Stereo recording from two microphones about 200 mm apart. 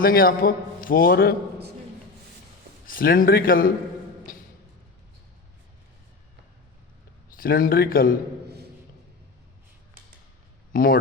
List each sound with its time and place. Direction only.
0.0 s a man's voice: 45° left (ahead or behind)
2.8 s a man's voice: 45° left (ahead or behind)
7.3 s a man's voice: 45° left (ahead or behind)
8.4 s a sound: 55° right (ahead or behind)
10.7 s speech: 45° left (ahead or behind)